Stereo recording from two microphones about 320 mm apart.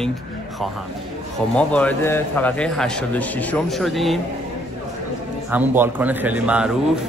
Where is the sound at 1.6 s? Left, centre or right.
Centre.